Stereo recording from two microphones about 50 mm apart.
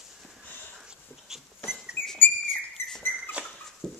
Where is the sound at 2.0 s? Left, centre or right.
Left.